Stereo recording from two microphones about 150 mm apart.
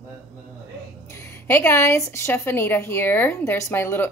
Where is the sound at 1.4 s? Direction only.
15° left (ahead or behind).